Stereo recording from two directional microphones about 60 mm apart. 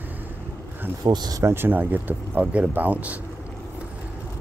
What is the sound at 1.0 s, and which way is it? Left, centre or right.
Speech, right.